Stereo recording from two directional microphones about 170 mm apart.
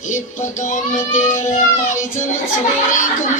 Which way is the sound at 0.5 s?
45° left (ahead or behind).